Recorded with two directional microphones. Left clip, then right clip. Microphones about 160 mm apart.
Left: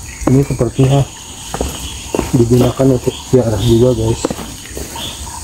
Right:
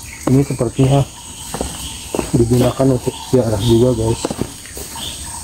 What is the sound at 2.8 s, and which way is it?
Speech, centre (ahead or behind).